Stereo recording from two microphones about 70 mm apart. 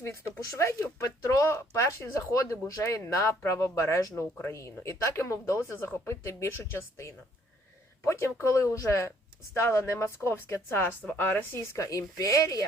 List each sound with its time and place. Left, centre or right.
0.0 s speech: left
11.0 s a woman's voice: left
11.9 s speech: left